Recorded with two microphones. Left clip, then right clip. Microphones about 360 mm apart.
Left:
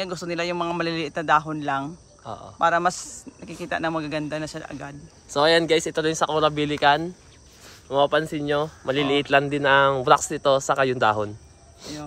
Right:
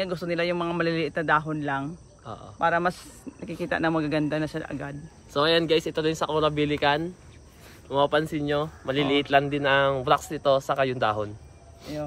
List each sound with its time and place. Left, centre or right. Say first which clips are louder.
0.0 s speech: even; centre
2.2 s speech: left 4 dB; left
2.6 s speech: left 3 dB; centre
5.3 s speech: left 3 dB; centre